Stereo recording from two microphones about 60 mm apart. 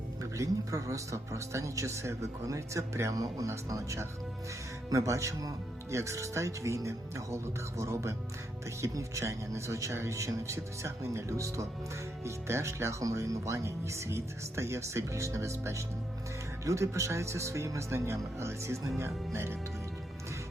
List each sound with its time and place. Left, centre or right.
0.2 s speech: right
3.7 s speech: right
5.9 s speech: right